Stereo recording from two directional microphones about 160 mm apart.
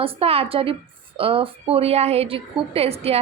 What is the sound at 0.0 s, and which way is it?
A woman's voice, 35° right (ahead or behind).